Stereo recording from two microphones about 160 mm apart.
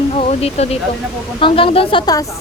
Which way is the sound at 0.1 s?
40° left (ahead or behind).